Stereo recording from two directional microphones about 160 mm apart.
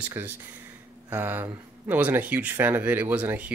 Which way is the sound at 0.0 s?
15° right (ahead or behind).